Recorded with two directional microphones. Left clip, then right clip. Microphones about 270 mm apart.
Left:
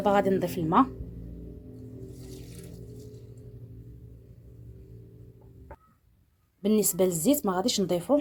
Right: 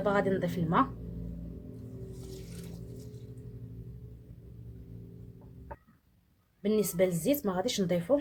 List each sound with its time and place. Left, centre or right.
0.0 s speech: left
6.6 s speech: left